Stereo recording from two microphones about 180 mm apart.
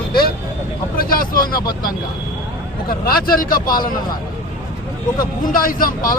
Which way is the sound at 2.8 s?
55° left (ahead or behind).